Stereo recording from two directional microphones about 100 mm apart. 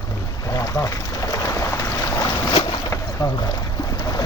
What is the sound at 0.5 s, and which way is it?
Boat, 35° left (ahead or behind).